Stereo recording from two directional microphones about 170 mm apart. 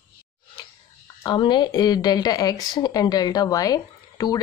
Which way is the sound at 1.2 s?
25° left (ahead or behind).